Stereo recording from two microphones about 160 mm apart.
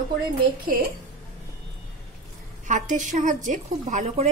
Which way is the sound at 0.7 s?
60° right (ahead or behind).